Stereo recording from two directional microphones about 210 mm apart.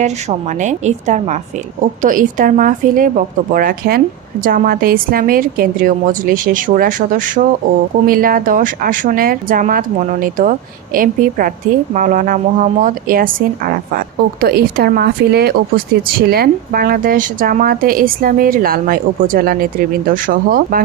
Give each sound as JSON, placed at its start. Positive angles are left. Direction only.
{"t": 0.0, "sound": "a woman's voice", "side_deg": -35}